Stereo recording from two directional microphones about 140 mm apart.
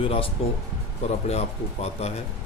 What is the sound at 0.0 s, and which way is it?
Speech, 40° left (ahead or behind).